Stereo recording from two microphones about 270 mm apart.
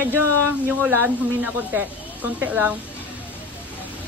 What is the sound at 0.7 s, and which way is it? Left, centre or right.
Speech, centre.